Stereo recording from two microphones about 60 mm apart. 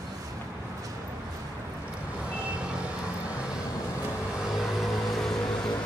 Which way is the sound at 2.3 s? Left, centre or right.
Centre.